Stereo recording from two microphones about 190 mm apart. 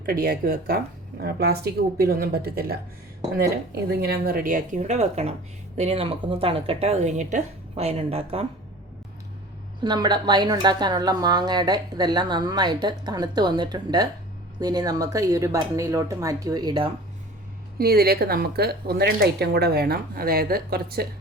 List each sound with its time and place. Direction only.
0.0 s a woman's voice: 50° right (ahead or behind)
4.0 s a woman's voice: 55° right (ahead or behind); by 8.4 s 30° right (ahead or behind)
9.8 s a woman's voice: 25° right (ahead or behind)
17.7 s speech: 55° right (ahead or behind)